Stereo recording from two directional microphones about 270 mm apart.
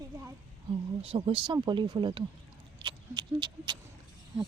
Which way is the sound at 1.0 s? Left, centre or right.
Right.